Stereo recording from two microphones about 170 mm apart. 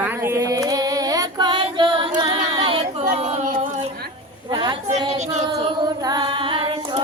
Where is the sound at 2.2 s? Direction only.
35° right (ahead or behind).